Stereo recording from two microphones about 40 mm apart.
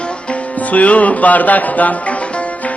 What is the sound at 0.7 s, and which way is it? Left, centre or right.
Speech, left.